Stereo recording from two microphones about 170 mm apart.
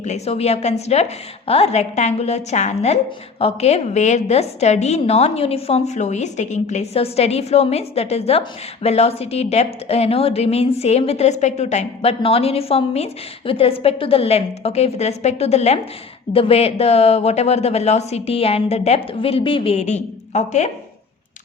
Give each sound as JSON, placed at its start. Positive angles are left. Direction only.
{"t": 0.0, "sound": "a woman's voice", "side_deg": 40}